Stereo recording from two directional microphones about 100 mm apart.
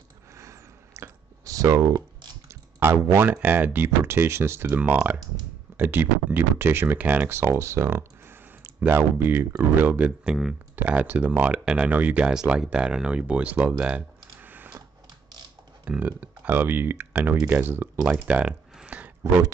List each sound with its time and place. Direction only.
0.4 s a sound: 30° right (ahead or behind)
2.4 s speech: 25° right (ahead or behind)
15.8 s speech: 15° right (ahead or behind)